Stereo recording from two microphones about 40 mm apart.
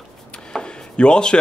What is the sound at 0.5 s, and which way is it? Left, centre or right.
Chopping, left.